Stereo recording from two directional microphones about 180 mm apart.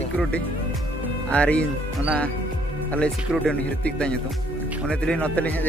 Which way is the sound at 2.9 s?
5° left (ahead or behind).